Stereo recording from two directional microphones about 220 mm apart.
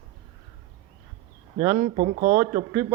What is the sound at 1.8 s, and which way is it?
Speech, 35° right (ahead or behind).